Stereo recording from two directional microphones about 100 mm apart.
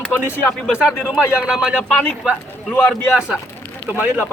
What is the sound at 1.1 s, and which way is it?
Speech, 5° right (ahead or behind).